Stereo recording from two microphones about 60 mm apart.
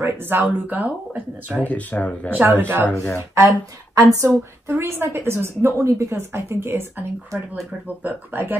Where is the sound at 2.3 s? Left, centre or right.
Right.